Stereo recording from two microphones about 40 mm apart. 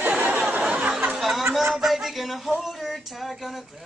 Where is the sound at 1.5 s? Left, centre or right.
Centre.